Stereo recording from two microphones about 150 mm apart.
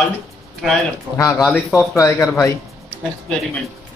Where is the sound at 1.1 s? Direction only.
15° right (ahead or behind).